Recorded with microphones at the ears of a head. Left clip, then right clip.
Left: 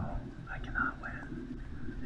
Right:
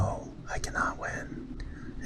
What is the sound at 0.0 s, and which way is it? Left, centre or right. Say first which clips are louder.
Whispering: right 9 dB; right.